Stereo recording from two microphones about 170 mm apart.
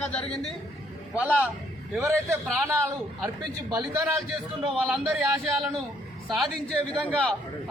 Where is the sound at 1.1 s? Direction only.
10° right (ahead or behind).